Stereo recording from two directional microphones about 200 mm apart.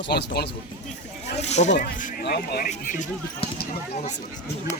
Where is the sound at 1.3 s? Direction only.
35° left (ahead or behind); by 2.7 s 50° left (ahead or behind).